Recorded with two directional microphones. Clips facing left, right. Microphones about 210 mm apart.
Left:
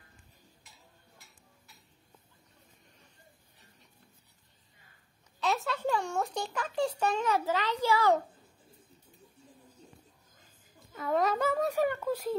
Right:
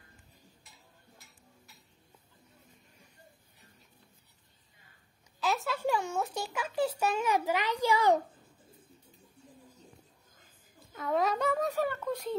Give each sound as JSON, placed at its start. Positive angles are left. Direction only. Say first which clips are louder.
{"t": 5.4, "sound": "a child's voice", "louder": "even", "side_deg": 0}
{"t": 10.9, "sound": "speech", "louder": "left 1 dB", "side_deg": 0}
{"t": 11.7, "sound": "speech", "louder": "left 3 dB", "side_deg": 15}